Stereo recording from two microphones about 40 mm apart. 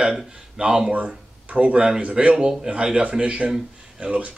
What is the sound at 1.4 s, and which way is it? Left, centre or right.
Speech, right.